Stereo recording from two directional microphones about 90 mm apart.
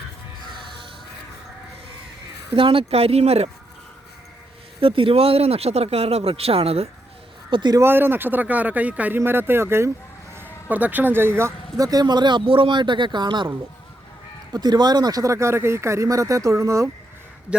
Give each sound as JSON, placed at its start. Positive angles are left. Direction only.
{"t": 2.6, "sound": "speech", "side_deg": -90}
{"t": 4.8, "sound": "speech", "side_deg": -85}
{"t": 7.5, "sound": "a man's voice", "side_deg": -55}
{"t": 7.8, "sound": "speech", "side_deg": -25}
{"t": 11.8, "sound": "a man's voice", "side_deg": -45}
{"t": 14.5, "sound": "speech", "side_deg": -50}